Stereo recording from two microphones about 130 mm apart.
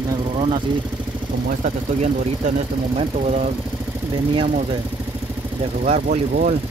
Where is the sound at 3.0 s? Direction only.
60° right (ahead or behind).